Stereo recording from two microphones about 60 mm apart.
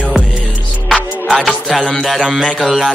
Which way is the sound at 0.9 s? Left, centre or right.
Centre.